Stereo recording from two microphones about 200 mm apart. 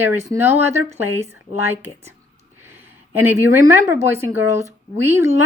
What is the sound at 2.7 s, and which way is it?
Speech, 10° right (ahead or behind).